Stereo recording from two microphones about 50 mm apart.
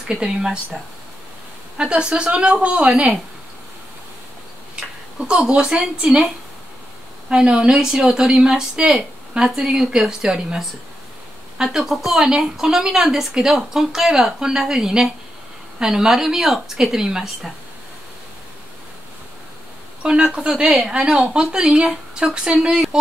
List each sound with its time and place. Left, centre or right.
0.1 s a woman's voice: centre
1.8 s a woman's voice: centre
4.7 s speech: centre
7.2 s a woman's voice: centre
20.0 s a woman's voice: right